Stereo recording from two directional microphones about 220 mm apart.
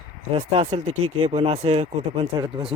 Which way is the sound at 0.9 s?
70° right (ahead or behind).